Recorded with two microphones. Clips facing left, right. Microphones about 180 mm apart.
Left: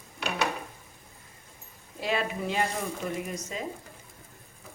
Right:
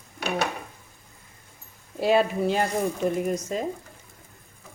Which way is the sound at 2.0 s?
40° right (ahead or behind).